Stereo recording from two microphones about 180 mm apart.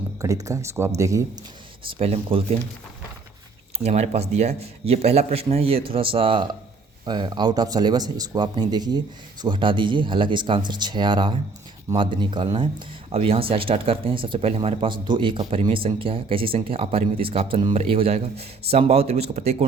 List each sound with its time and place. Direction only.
0.2 s speech: 20° right (ahead or behind)
1.9 s speech: 35° right (ahead or behind)
3.8 s speech: 35° right (ahead or behind)